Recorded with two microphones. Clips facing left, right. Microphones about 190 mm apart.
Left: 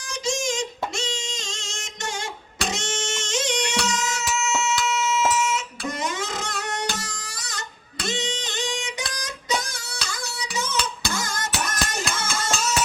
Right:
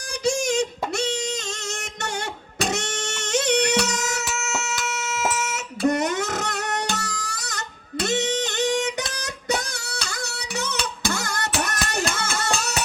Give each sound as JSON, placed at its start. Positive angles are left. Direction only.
{"t": 0.3, "sound": "music", "side_deg": -65}
{"t": 8.0, "sound": "a sound", "side_deg": -65}
{"t": 8.6, "sound": "music", "side_deg": -40}
{"t": 9.0, "sound": "music", "side_deg": -65}